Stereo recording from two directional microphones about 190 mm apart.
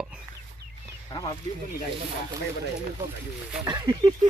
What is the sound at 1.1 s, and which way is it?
Speech, 25° left (ahead or behind).